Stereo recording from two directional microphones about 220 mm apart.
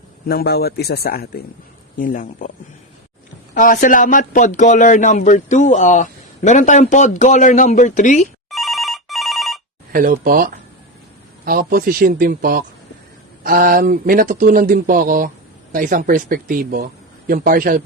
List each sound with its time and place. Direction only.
0.3 s a man's voice: 45° left (ahead or behind)
3.5 s speech: 40° left (ahead or behind)
8.4 s telephone bell ringing: centre (ahead or behind)
9.9 s speech: 40° right (ahead or behind)